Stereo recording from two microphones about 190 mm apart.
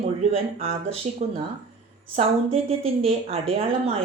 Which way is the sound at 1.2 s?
30° right (ahead or behind).